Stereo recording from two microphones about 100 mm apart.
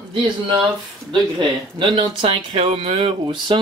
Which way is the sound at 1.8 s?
60° right (ahead or behind).